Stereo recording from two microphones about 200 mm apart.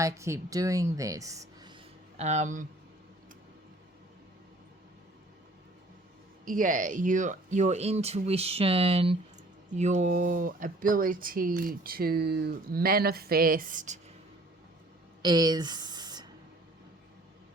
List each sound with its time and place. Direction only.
0.0 s speech: 15° right (ahead or behind)
2.1 s speech: 35° right (ahead or behind)
6.4 s speech: 40° right (ahead or behind)
15.2 s speech: 20° right (ahead or behind)